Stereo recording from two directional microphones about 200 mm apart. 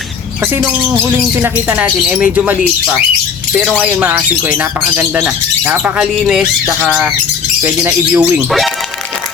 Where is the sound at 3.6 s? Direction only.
5° right (ahead or behind).